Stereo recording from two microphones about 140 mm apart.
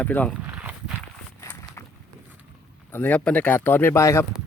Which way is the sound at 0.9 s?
10° left (ahead or behind).